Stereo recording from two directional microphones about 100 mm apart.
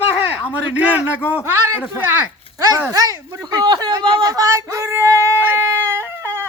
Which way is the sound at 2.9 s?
40° right (ahead or behind).